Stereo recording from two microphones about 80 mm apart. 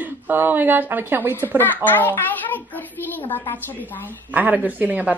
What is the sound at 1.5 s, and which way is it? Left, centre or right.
A child's voice, left.